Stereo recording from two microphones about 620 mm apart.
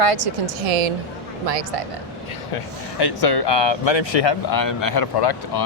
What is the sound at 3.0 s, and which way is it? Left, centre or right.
Speech, left.